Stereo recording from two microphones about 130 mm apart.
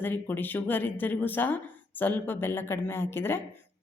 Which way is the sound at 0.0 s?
15° left (ahead or behind).